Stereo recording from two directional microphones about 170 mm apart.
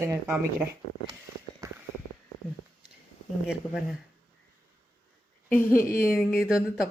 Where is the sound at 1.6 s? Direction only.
20° right (ahead or behind).